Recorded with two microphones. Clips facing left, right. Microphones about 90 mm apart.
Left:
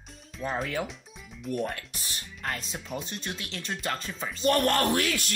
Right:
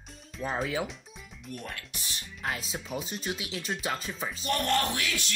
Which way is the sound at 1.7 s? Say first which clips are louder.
Left 3 dB; 40° left (ahead or behind).